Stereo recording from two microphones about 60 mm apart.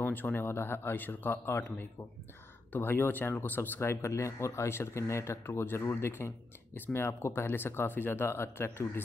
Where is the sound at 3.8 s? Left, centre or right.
Left.